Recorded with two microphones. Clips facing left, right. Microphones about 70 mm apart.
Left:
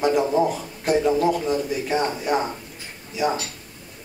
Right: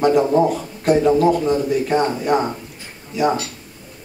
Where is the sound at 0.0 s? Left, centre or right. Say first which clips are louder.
Right 5 dB; centre.